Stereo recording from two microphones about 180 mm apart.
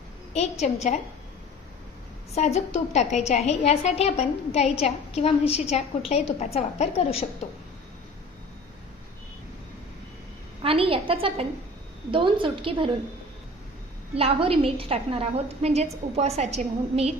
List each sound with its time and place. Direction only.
0.3 s a woman's voice: 40° left (ahead or behind)
2.3 s a woman's voice: 35° left (ahead or behind)
10.6 s a woman's voice: 30° right (ahead or behind)
14.2 s a woman's voice: 30° right (ahead or behind)